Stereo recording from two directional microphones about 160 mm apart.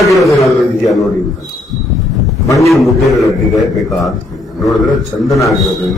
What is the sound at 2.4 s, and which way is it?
Speech, 20° left (ahead or behind).